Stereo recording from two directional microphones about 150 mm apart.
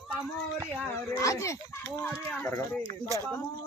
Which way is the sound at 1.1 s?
20° left (ahead or behind).